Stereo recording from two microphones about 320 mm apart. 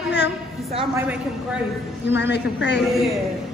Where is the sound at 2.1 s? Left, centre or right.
Left.